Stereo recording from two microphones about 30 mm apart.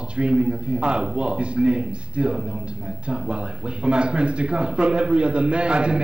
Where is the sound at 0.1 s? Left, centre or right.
Right.